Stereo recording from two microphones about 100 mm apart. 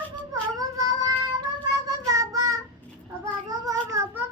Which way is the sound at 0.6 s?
35° right (ahead or behind).